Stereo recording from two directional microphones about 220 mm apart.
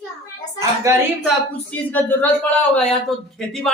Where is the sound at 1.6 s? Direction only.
5° left (ahead or behind).